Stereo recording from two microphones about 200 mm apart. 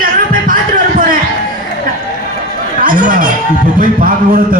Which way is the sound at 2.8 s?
40° right (ahead or behind).